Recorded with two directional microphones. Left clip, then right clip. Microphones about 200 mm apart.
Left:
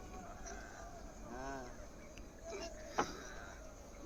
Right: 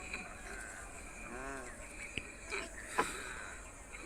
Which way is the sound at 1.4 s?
55° left (ahead or behind).